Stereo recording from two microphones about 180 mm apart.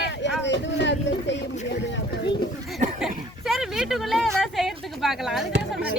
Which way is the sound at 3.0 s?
Centre (ahead or behind).